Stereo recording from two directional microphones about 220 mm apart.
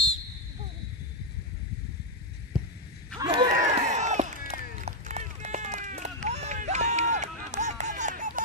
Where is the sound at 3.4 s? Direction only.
30° right (ahead or behind).